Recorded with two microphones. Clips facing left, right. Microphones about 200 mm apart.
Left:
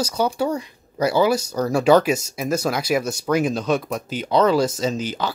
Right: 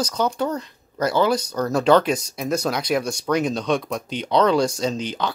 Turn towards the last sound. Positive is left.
turn(degrees=5)  # may be behind; listen again after turning